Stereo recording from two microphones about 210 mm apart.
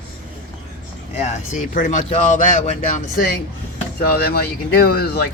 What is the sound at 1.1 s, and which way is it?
Speech, 35° left (ahead or behind).